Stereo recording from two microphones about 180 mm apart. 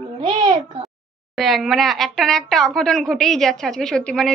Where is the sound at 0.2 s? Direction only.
25° right (ahead or behind).